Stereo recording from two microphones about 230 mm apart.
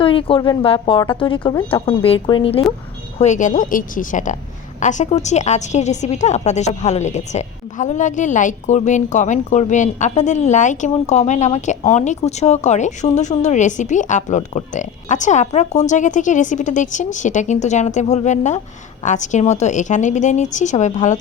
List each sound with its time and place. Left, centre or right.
0.0 s a woman's voice: left